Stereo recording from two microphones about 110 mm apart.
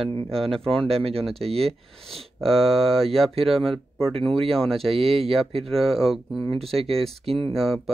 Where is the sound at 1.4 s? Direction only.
65° right (ahead or behind).